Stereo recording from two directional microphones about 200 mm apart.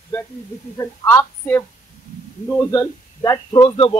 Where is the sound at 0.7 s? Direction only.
10° left (ahead or behind).